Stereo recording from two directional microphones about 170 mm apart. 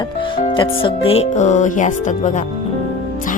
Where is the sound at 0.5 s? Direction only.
30° left (ahead or behind); by 2.3 s 45° left (ahead or behind).